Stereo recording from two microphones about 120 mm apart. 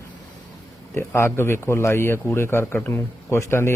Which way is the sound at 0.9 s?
20° left (ahead or behind).